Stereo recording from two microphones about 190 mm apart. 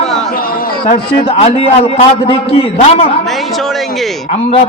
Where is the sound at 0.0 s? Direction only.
5° left (ahead or behind).